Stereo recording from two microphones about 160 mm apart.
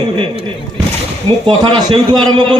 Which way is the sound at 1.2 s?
30° right (ahead or behind).